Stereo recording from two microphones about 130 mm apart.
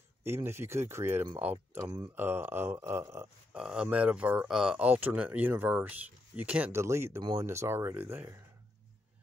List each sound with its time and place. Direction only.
0.2 s speech: 20° right (ahead or behind)
1.8 s speech: 30° right (ahead or behind)
2.1 s speech: 15° right (ahead or behind)
3.5 s speech: 5° right (ahead or behind)